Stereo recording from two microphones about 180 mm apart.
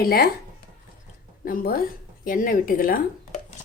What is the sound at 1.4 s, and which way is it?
Speech, 55° left (ahead or behind).